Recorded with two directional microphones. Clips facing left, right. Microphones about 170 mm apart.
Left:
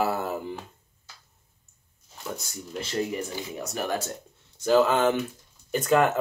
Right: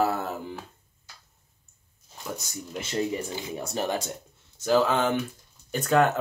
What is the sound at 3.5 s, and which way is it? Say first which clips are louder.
Speech: right 3 dB; 30° right (ahead or behind).